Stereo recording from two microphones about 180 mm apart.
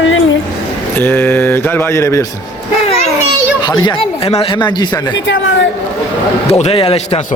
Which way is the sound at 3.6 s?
25° left (ahead or behind).